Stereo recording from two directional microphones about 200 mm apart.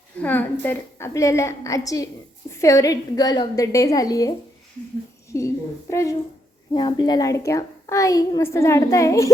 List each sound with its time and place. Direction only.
0.2 s a woman's voice: 10° left (ahead or behind)
5.9 s a woman's voice: 15° left (ahead or behind)